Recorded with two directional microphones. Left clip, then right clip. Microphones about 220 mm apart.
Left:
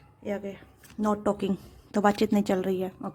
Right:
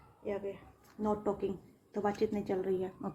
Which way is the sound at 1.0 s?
40° left (ahead or behind).